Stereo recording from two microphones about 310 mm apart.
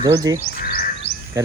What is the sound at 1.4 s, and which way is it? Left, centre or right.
Speech, centre.